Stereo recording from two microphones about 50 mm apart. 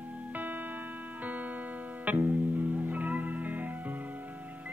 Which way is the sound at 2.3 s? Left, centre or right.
Right.